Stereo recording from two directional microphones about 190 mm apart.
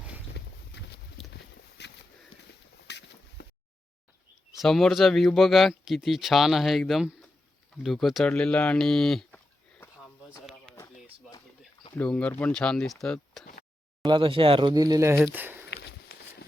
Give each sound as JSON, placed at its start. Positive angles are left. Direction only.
{"t": 0.4, "sound": "a sound", "side_deg": 60}
{"t": 1.2, "sound": "boat", "side_deg": 0}
{"t": 1.8, "sound": "a sound", "side_deg": 65}
{"t": 4.5, "sound": "speech", "side_deg": 0}
{"t": 11.9, "sound": "speech", "side_deg": 5}
{"t": 14.0, "sound": "speech", "side_deg": -25}